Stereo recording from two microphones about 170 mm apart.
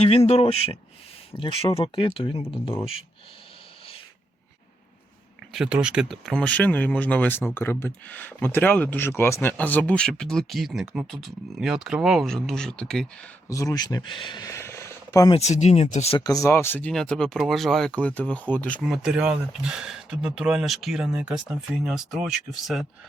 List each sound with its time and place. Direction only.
0.3 s speech: 35° left (ahead or behind)
5.5 s speech: 5° right (ahead or behind)
13.5 s speech: 20° left (ahead or behind)
15.3 s speech: 40° left (ahead or behind)
16.2 s speech: 20° left (ahead or behind)
18.9 s speech: 5° right (ahead or behind)